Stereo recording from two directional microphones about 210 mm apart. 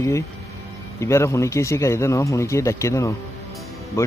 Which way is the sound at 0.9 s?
15° left (ahead or behind).